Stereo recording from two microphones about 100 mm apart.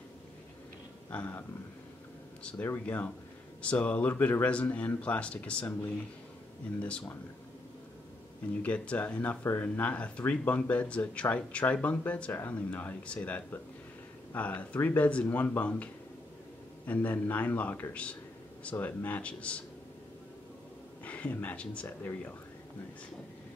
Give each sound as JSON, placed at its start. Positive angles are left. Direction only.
{"t": 1.1, "sound": "speech", "side_deg": 10}
{"t": 2.4, "sound": "speech", "side_deg": 15}
{"t": 6.9, "sound": "speech", "side_deg": 10}
{"t": 8.6, "sound": "speech", "side_deg": 10}
{"t": 21.0, "sound": "speech", "side_deg": 15}